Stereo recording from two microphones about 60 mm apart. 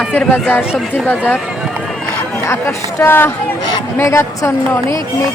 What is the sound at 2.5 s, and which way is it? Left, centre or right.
A woman's voice, left.